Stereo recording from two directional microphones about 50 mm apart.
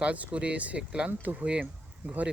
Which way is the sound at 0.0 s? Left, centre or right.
Right.